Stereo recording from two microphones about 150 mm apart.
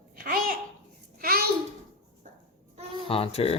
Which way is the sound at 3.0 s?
40° left (ahead or behind).